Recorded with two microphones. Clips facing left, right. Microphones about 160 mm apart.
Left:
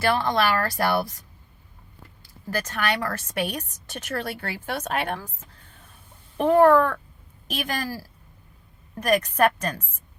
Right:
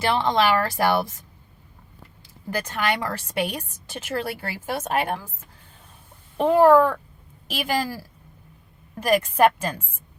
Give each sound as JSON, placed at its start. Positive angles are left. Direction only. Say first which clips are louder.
{"t": 0.0, "sound": "speech", "louder": "right 1 dB", "side_deg": -20}
{"t": 2.5, "sound": "speech", "louder": "right 1 dB", "side_deg": -15}
{"t": 6.3, "sound": "speech", "louder": "right 1 dB", "side_deg": -15}
{"t": 9.0, "sound": "speech", "louder": "right 2 dB", "side_deg": -10}